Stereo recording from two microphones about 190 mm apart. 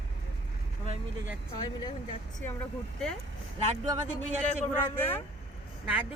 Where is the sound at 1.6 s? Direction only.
25° left (ahead or behind).